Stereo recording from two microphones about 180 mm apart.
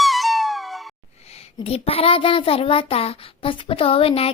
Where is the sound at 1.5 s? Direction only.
35° left (ahead or behind).